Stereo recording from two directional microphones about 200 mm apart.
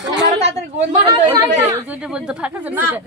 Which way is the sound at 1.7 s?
5° right (ahead or behind).